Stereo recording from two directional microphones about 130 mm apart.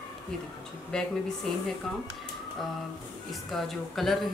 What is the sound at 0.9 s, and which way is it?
Speech, 5° left (ahead or behind).